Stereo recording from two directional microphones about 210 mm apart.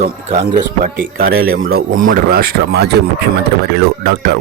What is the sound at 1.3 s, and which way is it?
Speech, 85° right.